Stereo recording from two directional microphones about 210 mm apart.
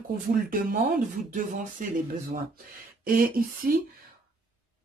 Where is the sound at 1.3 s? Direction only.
40° right (ahead or behind).